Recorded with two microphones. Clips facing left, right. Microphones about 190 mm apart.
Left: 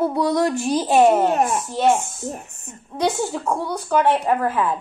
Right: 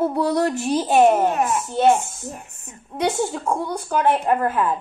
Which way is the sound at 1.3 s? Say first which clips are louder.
Left 1 dB; 35° left (ahead or behind).